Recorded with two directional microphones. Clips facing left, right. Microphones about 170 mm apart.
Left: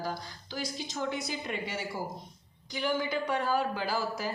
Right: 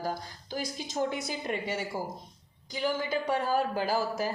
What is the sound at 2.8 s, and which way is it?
A woman's voice, 40° right (ahead or behind).